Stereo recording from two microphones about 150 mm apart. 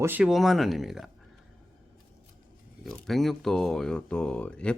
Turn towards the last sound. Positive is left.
turn(degrees=5)  # may be behind; listen again after turning